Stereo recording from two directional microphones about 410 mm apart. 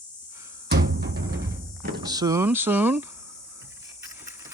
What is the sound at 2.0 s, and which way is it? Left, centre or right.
Speech, centre.